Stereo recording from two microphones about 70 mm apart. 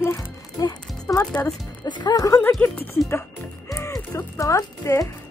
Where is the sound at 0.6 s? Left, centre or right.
Left.